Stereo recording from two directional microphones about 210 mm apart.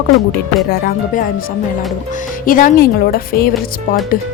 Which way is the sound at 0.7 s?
45° left (ahead or behind).